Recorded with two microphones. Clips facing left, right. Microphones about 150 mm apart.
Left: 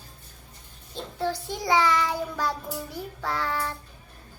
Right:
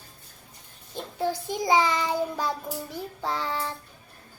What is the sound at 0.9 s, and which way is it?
Child singing, 15° right (ahead or behind).